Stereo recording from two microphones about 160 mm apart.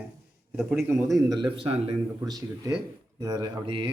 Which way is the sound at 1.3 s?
30° right (ahead or behind).